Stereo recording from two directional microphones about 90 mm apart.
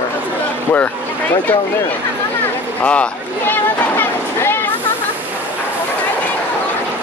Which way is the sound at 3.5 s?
25° left (ahead or behind).